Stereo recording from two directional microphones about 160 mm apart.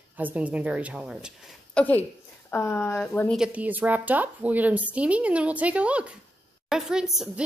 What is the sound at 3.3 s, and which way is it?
Speech, 5° right (ahead or behind).